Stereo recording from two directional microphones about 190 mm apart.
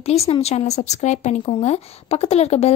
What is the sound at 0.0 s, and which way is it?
A woman's voice, 35° left (ahead or behind).